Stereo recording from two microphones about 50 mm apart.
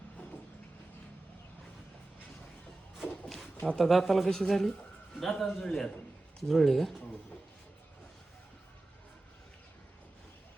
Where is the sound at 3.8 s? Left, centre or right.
Centre.